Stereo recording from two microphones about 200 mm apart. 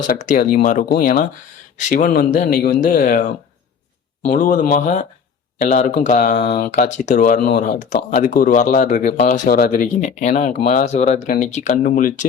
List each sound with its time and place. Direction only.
0.1 s speech: 40° left (ahead or behind)
6.4 s speech: 50° left (ahead or behind)
6.7 s speech: 40° left (ahead or behind)